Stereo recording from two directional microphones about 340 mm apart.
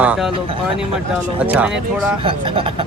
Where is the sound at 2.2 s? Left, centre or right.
Centre.